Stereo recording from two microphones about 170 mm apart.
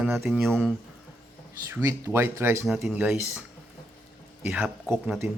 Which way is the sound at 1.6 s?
15° right (ahead or behind).